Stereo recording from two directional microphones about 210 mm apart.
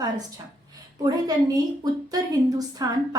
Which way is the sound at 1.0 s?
20° right (ahead or behind).